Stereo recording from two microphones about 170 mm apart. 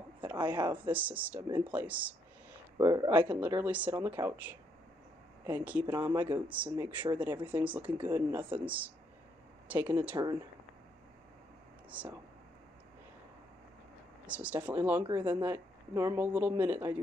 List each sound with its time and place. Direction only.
0.3 s speech: 10° right (ahead or behind)
2.8 s speech: 20° right (ahead or behind)
3.3 s speech: 10° right (ahead or behind)
11.9 s speech: 10° right (ahead or behind)
14.2 s speech: 10° right (ahead or behind)